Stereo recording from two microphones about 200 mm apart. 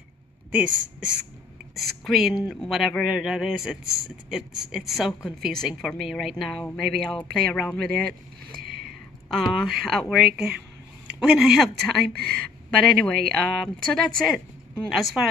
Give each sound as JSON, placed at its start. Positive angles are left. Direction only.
{"t": 0.5, "sound": "a woman's voice", "side_deg": -10}
{"t": 8.5, "sound": "a sound", "side_deg": -45}
{"t": 9.3, "sound": "a woman's voice", "side_deg": 0}
{"t": 12.1, "sound": "speech", "side_deg": -50}
{"t": 12.7, "sound": "a woman's voice", "side_deg": 5}